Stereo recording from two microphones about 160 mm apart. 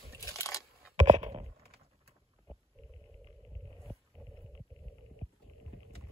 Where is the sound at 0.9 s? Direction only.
45° right (ahead or behind).